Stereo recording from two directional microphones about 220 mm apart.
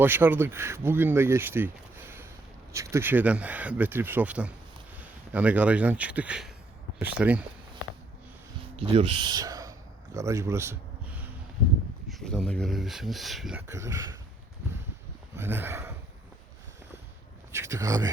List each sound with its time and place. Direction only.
0.0 s speech: 10° right (ahead or behind)
8.8 s speech: 25° right (ahead or behind); by 13.6 s centre (ahead or behind)
13.7 s speech: 15° right (ahead or behind)
15.4 s speech: 10° right (ahead or behind)
17.5 s speech: 15° right (ahead or behind)